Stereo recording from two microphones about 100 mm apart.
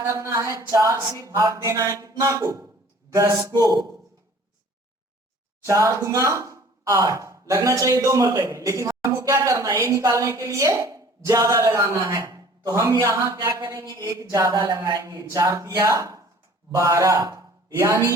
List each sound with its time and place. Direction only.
0.0 s speech: 30° right (ahead or behind)
5.6 s a man's voice: 30° right (ahead or behind)